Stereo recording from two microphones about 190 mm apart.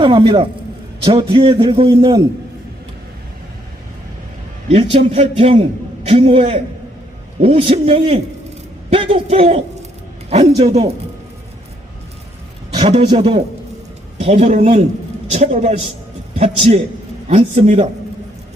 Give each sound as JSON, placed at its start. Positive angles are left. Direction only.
{"t": 0.0, "sound": "a man's voice", "side_deg": -30}
{"t": 4.7, "sound": "a man's voice", "side_deg": -30}
{"t": 13.1, "sound": "a man's voice", "side_deg": -30}